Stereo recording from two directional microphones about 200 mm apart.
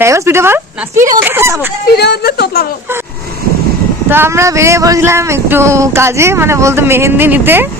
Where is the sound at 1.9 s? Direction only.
55° left (ahead or behind).